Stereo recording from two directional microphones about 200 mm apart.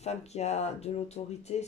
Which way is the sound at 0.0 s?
35° left (ahead or behind).